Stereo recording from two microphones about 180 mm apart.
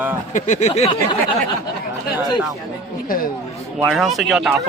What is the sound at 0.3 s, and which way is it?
Speech, 40° left (ahead or behind).